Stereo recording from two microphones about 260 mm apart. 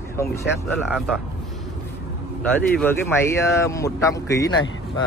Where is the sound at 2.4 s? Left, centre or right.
Centre.